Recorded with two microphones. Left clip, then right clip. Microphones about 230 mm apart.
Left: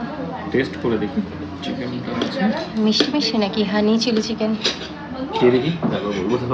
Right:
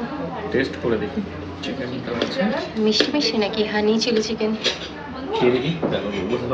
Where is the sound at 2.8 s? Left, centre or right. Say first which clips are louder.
Even; centre.